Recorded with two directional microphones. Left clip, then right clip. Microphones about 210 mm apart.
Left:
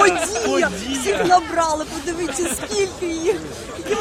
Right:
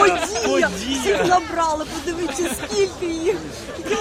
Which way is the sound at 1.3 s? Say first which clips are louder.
Left 2 dB; 20° left (ahead or behind).